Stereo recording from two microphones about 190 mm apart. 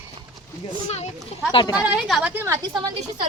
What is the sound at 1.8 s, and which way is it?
Speech, 5° right (ahead or behind).